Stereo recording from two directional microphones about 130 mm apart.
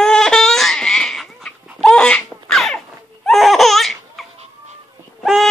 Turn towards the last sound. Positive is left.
turn(degrees=0)  # may be behind; listen again after turning